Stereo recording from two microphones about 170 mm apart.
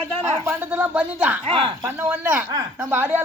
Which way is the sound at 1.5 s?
30° right (ahead or behind).